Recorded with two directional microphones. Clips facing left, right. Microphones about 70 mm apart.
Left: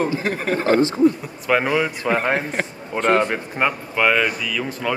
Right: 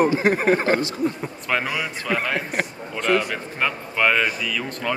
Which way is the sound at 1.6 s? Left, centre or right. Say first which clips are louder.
Left 7 dB; left.